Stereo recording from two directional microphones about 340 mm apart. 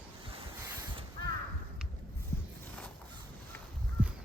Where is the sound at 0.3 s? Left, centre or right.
Centre.